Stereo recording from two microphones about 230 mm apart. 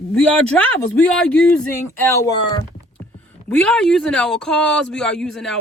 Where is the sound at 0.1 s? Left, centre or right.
Centre.